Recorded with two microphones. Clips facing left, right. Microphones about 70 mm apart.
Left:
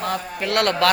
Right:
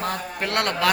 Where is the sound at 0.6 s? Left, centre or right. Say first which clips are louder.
Left 5 dB; centre.